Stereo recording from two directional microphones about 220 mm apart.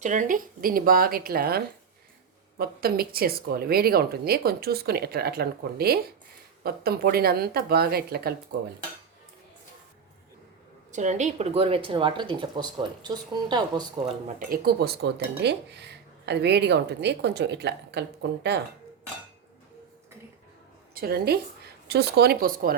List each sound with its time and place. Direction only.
0.0 s speech: 35° right (ahead or behind)
10.9 s speech: 35° right (ahead or behind)
14.3 s speech: 40° right (ahead or behind)
20.9 s speech: 45° right (ahead or behind)